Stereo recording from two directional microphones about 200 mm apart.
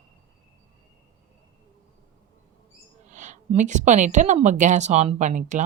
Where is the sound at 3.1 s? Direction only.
35° right (ahead or behind).